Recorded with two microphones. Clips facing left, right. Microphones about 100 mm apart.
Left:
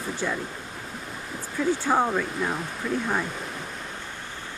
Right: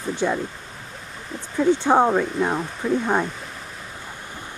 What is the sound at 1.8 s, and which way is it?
Speech, 30° right (ahead or behind).